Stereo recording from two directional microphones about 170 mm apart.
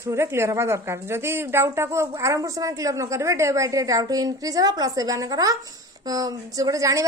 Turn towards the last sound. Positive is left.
turn(degrees=-20)  # may be behind; listen again after turning